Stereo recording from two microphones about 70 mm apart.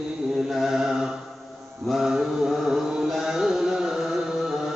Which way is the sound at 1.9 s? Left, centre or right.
Centre.